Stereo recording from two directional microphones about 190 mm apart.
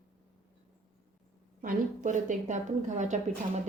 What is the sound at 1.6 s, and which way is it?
A woman's voice, 45° right (ahead or behind).